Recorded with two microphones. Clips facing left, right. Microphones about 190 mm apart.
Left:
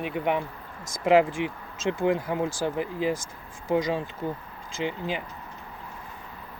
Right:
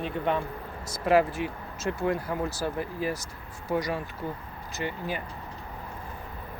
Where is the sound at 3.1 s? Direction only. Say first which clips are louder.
Left 3 dB; 50° left (ahead or behind).